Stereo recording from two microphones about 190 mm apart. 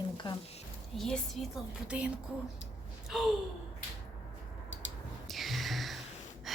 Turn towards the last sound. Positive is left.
turn(degrees=0)  # may be behind; listen again after turning